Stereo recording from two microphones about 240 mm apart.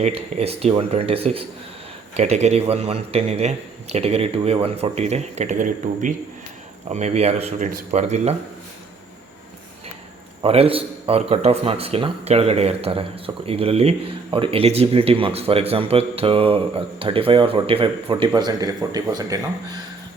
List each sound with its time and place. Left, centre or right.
0.0 s a man's voice: right
10.4 s a man's voice: right